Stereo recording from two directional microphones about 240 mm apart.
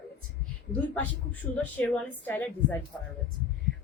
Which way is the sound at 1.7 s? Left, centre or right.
Centre.